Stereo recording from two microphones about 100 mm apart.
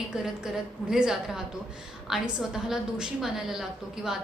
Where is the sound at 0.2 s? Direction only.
5° right (ahead or behind).